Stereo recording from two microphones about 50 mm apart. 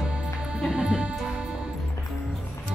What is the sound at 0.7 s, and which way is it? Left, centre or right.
Music, centre.